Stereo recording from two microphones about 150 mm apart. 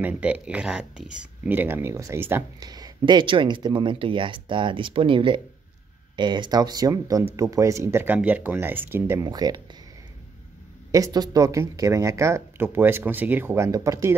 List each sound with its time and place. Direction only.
0.0 s speech: 10° right (ahead or behind)
2.6 s speech: 25° right (ahead or behind)
9.2 s speech: 25° right (ahead or behind)
10.9 s speech: 25° right (ahead or behind)